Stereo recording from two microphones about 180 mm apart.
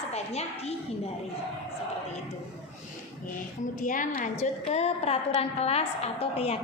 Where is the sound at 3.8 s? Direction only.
45° left (ahead or behind).